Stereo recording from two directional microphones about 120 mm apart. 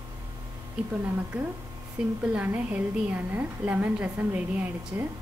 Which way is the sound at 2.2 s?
10° right (ahead or behind).